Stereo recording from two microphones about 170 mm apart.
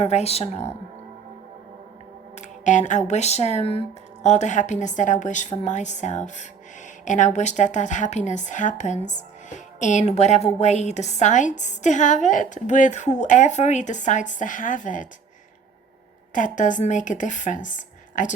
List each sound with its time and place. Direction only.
0.0 s a woman's voice: 40° left (ahead or behind)
2.3 s music: 45° left (ahead or behind)
3.1 s a woman's voice: 40° left (ahead or behind)
16.3 s a woman's voice: 50° left (ahead or behind)